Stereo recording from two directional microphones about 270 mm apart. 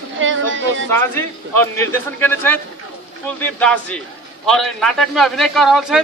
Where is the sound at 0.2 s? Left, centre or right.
Right.